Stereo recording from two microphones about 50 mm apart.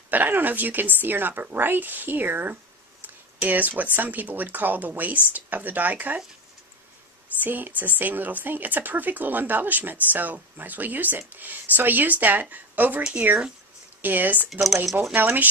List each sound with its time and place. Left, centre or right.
0.1 s speech: right
7.4 s speech: right
14.0 s speech: right
14.5 s speech: centre
15.1 s speech: right